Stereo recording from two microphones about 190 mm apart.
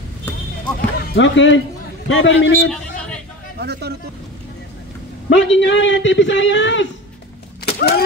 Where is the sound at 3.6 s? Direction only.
60° right (ahead or behind).